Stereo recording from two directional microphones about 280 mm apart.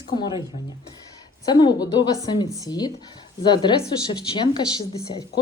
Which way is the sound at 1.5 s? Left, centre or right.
Centre.